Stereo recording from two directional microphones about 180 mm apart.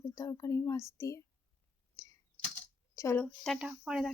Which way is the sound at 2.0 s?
15° left (ahead or behind).